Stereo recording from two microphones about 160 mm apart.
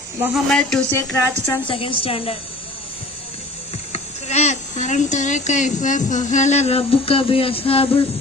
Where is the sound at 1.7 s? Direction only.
35° left (ahead or behind).